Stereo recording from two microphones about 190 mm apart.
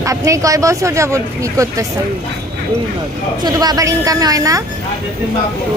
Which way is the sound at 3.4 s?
20° right (ahead or behind).